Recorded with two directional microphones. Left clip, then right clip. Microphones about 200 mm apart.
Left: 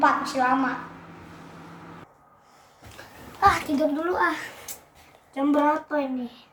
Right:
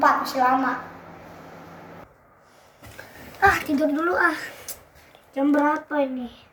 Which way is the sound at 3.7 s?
5° left (ahead or behind).